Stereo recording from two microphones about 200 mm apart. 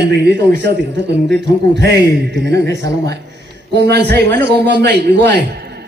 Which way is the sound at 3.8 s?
55° right (ahead or behind).